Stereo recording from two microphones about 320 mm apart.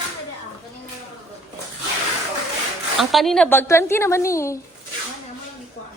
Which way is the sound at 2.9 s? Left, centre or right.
Centre.